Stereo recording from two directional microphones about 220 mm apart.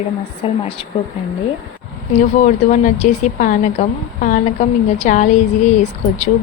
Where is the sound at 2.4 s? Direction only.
35° left (ahead or behind).